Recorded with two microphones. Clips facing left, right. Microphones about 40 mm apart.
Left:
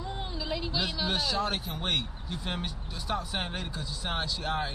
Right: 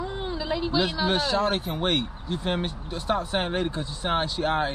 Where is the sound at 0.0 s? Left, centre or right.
Centre.